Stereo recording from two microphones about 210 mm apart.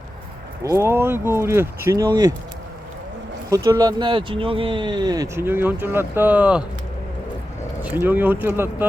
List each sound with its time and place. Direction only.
0.6 s speech: 15° right (ahead or behind)
3.5 s speech: 15° right (ahead or behind)
7.8 s speech: 10° right (ahead or behind)